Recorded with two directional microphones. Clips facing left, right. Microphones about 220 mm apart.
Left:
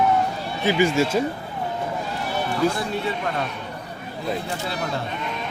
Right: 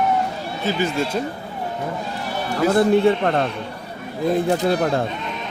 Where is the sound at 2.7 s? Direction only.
60° right (ahead or behind).